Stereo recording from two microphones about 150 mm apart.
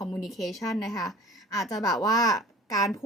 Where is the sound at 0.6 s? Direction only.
20° left (ahead or behind).